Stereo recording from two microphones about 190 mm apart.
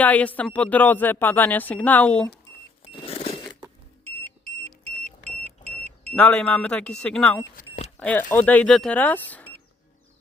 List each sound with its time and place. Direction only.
0.0 s speech: 10° left (ahead or behind)
2.9 s a sound: 30° left (ahead or behind)
6.1 s speech: 5° left (ahead or behind)